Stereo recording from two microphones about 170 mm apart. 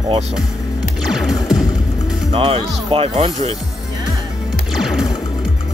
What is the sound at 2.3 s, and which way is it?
Speech, 35° right (ahead or behind).